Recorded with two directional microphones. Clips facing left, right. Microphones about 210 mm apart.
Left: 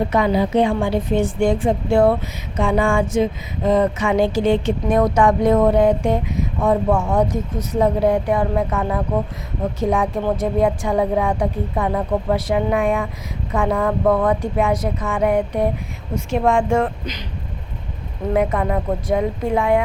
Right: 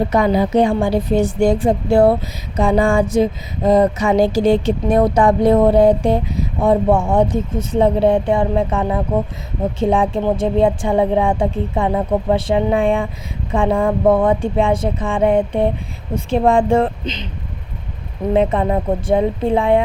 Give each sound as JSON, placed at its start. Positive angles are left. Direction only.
{"t": 0.1, "sound": "music", "side_deg": -40}
{"t": 9.8, "sound": "speech", "side_deg": -30}
{"t": 16.1, "sound": "music", "side_deg": -30}
{"t": 18.3, "sound": "speech", "side_deg": -25}